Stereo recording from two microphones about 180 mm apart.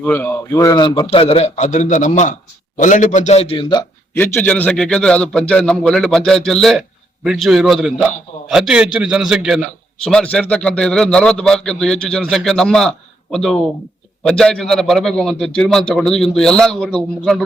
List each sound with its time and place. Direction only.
0.0 s a man's voice: 10° left (ahead or behind)
4.2 s a man's voice: 10° left (ahead or behind)